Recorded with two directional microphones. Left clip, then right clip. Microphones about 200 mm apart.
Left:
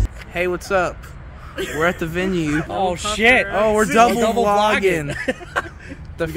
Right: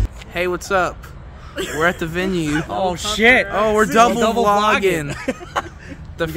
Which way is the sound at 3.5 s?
15° left (ahead or behind).